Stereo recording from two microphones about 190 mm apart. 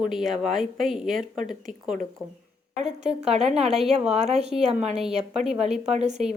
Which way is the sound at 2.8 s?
35° right (ahead or behind).